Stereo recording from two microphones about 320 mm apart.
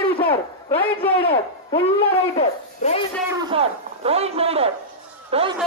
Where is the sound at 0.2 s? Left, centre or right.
Centre.